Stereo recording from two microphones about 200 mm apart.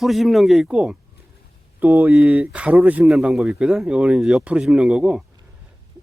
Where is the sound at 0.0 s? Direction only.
Centre (ahead or behind).